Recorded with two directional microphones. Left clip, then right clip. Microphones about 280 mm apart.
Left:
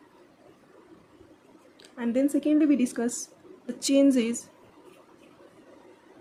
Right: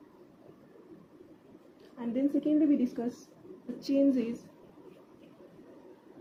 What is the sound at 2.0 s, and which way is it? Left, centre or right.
Speech, left.